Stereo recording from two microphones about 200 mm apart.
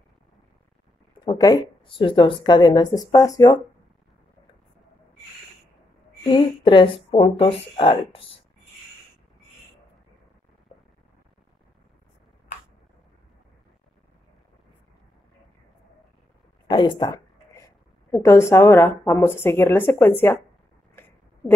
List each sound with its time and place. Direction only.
1.1 s a woman's voice: 20° left (ahead or behind)
6.2 s a woman's voice: 25° left (ahead or behind)
16.6 s a sound: 25° left (ahead or behind)
18.1 s a woman's voice: 15° left (ahead or behind)